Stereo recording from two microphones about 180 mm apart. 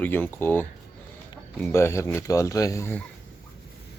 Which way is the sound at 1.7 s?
15° left (ahead or behind).